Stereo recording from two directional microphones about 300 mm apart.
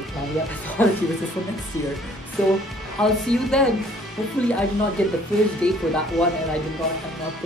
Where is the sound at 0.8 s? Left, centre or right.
Centre.